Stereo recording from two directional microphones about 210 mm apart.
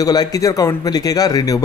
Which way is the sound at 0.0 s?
15° left (ahead or behind).